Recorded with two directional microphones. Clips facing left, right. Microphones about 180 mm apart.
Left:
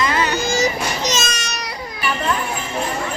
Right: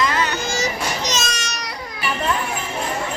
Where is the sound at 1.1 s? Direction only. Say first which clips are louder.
Left 2 dB; 5° left (ahead or behind).